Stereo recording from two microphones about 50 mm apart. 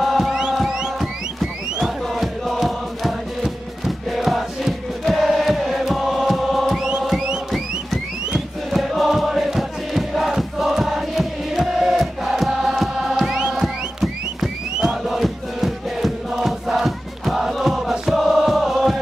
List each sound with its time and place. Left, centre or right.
0.0 s music: centre
8.6 s music: centre
13.4 s music: centre
17.9 s chant: centre